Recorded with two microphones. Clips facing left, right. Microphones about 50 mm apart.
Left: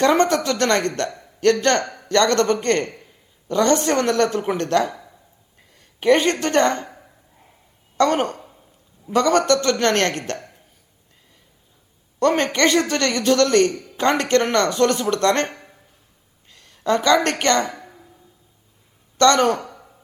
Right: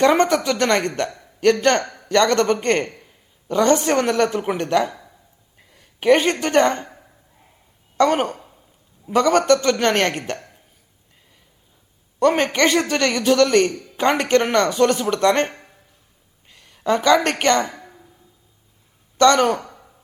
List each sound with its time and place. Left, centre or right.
0.0 s a woman's voice: centre
1.2 s a sound: centre
1.6 s a woman's voice: centre
6.0 s a woman's voice: centre
7.9 s a woman's voice: centre
12.2 s a woman's voice: centre
16.5 s a sound: centre
17.2 s a woman's voice: centre
19.1 s a woman's voice: centre